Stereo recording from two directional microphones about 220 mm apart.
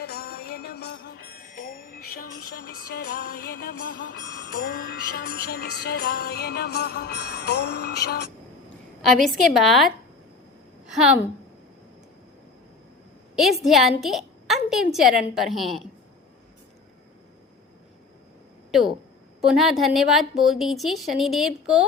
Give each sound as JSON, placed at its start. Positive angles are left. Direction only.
{"t": 0.0, "sound": "music", "side_deg": 45}
{"t": 4.2, "sound": "music", "side_deg": -20}
{"t": 4.7, "sound": "music", "side_deg": 45}
{"t": 9.0, "sound": "a woman's voice", "side_deg": 0}
{"t": 13.3, "sound": "a woman's voice", "side_deg": 0}
{"t": 18.7, "sound": "a woman's voice", "side_deg": 0}